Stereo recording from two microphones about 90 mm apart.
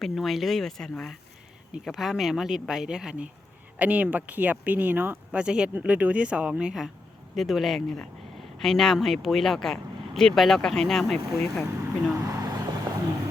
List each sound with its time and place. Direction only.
0.0 s speech: centre (ahead or behind)
12.2 s vehicle: 40° right (ahead or behind)